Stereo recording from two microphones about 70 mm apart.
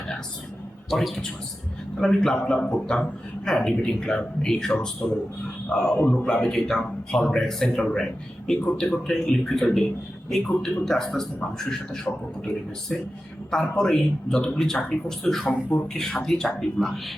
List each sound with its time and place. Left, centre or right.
0.9 s a man's voice: centre
15.4 s speech: left
16.0 s speech: centre